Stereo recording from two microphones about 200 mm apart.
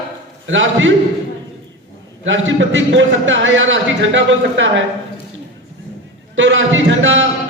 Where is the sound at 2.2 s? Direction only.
70° right (ahead or behind).